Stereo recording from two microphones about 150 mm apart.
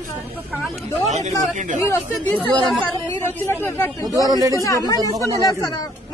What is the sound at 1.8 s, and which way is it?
Speech, 15° left (ahead or behind).